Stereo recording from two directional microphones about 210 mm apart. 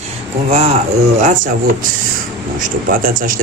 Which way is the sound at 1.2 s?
35° right (ahead or behind).